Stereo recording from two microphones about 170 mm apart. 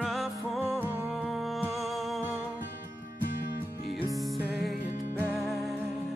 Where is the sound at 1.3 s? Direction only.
Centre (ahead or behind).